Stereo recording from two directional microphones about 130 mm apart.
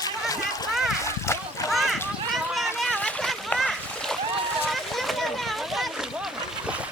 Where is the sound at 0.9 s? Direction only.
20° left (ahead or behind).